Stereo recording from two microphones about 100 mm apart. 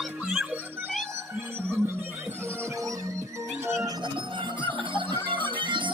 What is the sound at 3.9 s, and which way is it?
Music, 55° right (ahead or behind).